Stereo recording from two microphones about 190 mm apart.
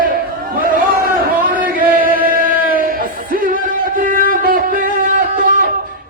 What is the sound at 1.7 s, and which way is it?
Chant, 50° right (ahead or behind).